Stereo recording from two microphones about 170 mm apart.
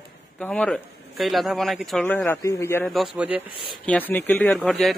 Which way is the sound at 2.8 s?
Centre (ahead or behind).